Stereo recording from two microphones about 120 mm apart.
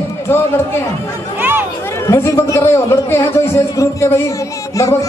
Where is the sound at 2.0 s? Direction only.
25° left (ahead or behind).